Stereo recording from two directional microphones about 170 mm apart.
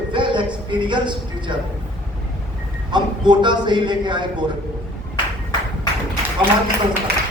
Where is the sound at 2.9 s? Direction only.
25° right (ahead or behind).